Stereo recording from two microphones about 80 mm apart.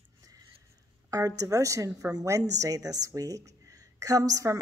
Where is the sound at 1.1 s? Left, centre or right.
Right.